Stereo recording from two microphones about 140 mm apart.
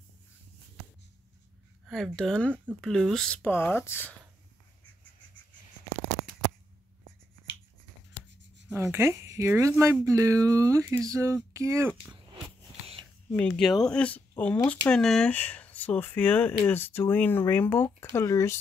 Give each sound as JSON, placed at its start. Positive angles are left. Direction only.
{"t": 1.9, "sound": "speech", "side_deg": 0}
{"t": 3.4, "sound": "speech", "side_deg": 15}
{"t": 8.7, "sound": "speech", "side_deg": -20}
{"t": 13.3, "sound": "speech", "side_deg": 5}